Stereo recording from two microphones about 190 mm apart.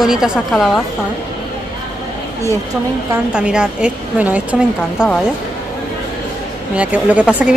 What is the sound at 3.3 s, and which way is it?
A woman's voice, 5° right (ahead or behind).